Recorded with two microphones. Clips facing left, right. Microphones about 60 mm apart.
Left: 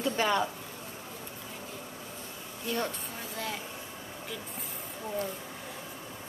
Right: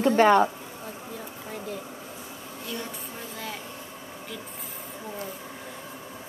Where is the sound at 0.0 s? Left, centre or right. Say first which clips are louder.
Right 10 dB; right.